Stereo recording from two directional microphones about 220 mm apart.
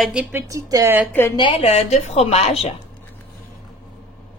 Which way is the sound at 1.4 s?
25° left (ahead or behind).